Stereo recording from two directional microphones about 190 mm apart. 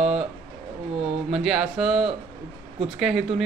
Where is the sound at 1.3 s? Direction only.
Centre (ahead or behind).